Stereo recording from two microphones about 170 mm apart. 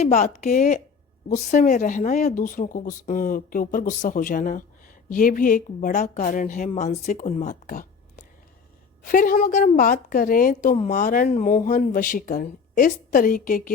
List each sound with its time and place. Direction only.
0.0 s a woman's voice: 45° left (ahead or behind)
9.0 s a woman's voice: 55° left (ahead or behind)